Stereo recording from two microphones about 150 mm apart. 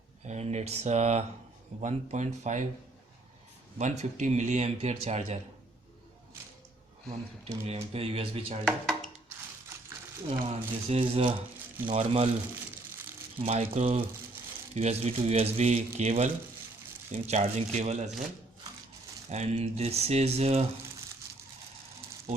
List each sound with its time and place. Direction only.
0.3 s speech: 50° right (ahead or behind)
3.8 s speech: 55° right (ahead or behind)
7.4 s speech: 40° right (ahead or behind)
8.6 s speech: centre (ahead or behind)
10.5 s speech: 45° right (ahead or behind)
11.9 s speech: 45° right (ahead or behind)
13.4 s speech: 45° right (ahead or behind)
19.3 s speech: 45° right (ahead or behind)